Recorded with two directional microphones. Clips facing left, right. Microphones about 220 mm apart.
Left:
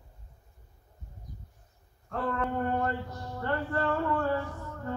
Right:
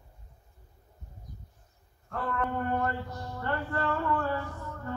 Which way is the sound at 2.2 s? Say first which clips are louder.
Left 1 dB; 30° left (ahead or behind).